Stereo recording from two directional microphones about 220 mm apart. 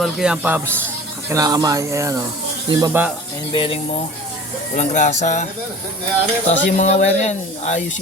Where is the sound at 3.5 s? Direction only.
25° left (ahead or behind).